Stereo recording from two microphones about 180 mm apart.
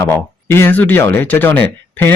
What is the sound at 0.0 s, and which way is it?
Speech, 15° left (ahead or behind).